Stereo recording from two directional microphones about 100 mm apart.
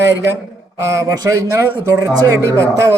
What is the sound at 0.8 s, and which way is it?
Speech, 30° right (ahead or behind).